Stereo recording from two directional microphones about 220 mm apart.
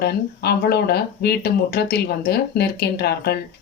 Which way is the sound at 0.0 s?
45° left (ahead or behind).